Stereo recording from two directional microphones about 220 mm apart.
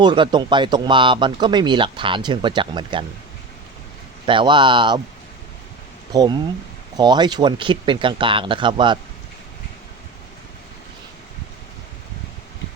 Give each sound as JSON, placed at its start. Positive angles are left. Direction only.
{"t": 0.0, "sound": "speech", "side_deg": -20}
{"t": 4.3, "sound": "speech", "side_deg": -20}
{"t": 6.1, "sound": "speech", "side_deg": -20}